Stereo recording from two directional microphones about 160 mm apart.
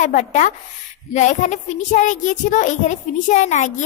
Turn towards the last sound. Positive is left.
turn(degrees=45)  # may be behind; listen again after turning